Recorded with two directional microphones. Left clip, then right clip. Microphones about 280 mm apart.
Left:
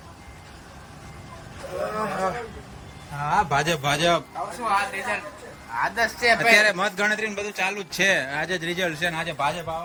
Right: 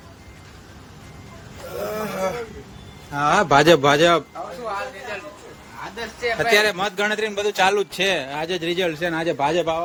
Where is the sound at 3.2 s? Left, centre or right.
Right.